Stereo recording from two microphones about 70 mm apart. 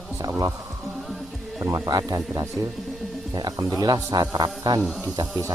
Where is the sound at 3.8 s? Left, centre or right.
Right.